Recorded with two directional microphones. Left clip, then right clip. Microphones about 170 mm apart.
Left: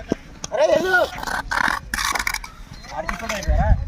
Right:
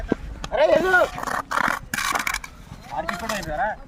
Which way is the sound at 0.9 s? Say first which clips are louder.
Even; 10° left (ahead or behind).